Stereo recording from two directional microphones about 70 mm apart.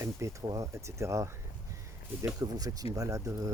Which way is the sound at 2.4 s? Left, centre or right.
Right.